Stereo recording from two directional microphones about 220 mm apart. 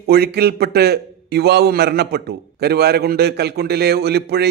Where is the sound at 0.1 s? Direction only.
45° right (ahead or behind).